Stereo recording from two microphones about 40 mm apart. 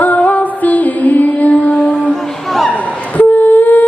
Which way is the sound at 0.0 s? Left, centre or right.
Left.